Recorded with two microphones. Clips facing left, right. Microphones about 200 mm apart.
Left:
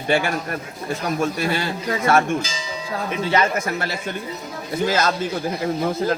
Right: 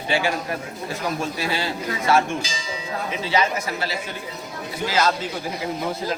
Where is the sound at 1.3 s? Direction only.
55° left (ahead or behind).